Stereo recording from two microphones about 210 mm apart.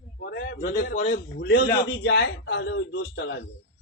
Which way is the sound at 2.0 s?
65° left (ahead or behind).